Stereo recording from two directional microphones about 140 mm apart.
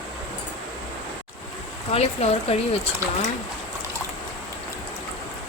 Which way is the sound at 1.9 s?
45° left (ahead or behind).